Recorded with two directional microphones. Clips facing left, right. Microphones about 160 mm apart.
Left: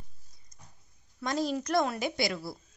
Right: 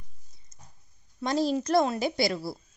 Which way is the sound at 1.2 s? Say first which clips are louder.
Right 4 dB; 30° right (ahead or behind).